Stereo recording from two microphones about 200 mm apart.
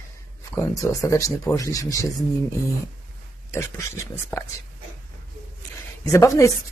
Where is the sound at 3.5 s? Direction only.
15° left (ahead or behind).